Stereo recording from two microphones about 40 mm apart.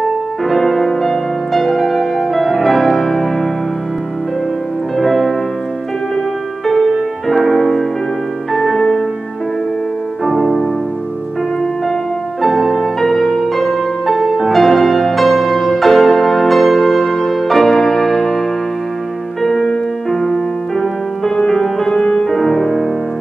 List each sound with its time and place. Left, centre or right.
0.5 s music: centre
4.9 s music: centre
6.6 s music: centre
10.2 s music: centre
12.4 s music: centre
19.4 s music: centre